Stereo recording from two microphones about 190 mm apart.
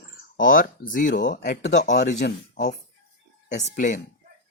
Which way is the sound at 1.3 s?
60° left (ahead or behind).